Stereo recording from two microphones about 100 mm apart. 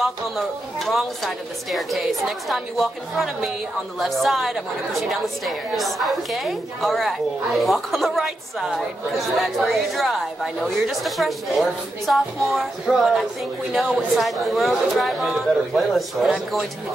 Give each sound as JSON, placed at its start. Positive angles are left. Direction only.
{"t": 0.7, "sound": "a woman's voice", "side_deg": 0}